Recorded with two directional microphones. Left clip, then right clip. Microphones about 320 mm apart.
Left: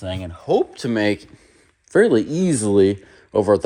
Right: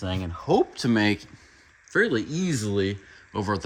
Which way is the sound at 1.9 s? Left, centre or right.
Centre.